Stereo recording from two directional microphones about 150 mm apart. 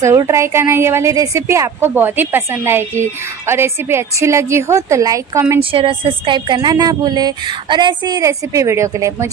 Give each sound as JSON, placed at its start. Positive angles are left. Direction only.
{"t": 0.0, "sound": "a woman's voice", "side_deg": -20}
{"t": 5.6, "sound": "speech", "side_deg": -35}